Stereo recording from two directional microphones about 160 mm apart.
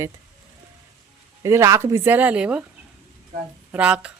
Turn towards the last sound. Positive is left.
turn(degrees=-10)  # may be behind; listen again after turning